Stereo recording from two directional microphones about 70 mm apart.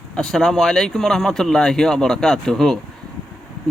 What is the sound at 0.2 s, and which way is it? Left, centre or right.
Speech, centre.